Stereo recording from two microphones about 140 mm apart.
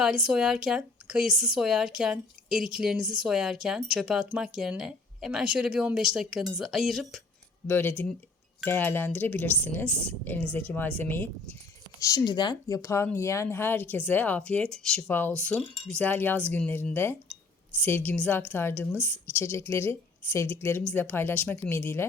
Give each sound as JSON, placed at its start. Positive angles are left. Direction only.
{"t": 0.0, "sound": "a woman's voice", "side_deg": -5}
{"t": 7.7, "sound": "a woman's voice", "side_deg": 15}
{"t": 11.9, "sound": "a woman's voice", "side_deg": 25}